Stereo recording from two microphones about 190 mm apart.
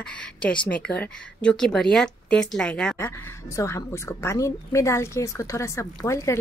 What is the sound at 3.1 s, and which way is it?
A woman's voice, 15° left (ahead or behind).